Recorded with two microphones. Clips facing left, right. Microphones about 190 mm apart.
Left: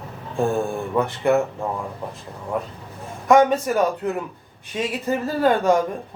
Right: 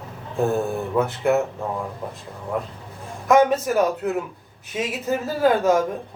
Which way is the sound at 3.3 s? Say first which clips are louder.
Left 1 dB; 5° right (ahead or behind).